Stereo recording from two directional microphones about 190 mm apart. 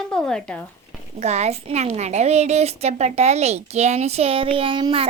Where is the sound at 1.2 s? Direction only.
35° right (ahead or behind).